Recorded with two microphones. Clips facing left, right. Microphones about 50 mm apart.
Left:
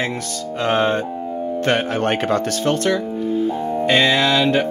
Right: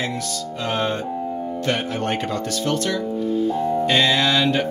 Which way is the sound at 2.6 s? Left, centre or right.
Left.